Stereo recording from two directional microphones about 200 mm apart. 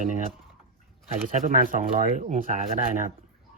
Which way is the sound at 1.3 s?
40° right (ahead or behind).